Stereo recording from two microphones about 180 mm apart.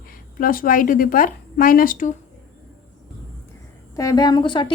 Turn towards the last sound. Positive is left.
turn(degrees=25)  # may be behind; listen again after turning